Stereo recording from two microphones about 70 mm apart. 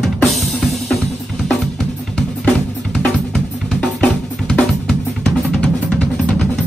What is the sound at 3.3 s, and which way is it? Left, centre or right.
Drum, centre.